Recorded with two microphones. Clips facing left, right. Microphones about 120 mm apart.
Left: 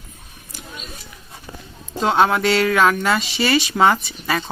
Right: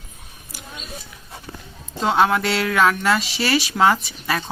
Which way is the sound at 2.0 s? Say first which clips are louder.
Left 1 dB; centre (ahead or behind).